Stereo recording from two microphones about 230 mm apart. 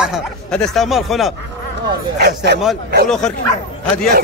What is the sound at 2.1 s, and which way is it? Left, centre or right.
Speech, right.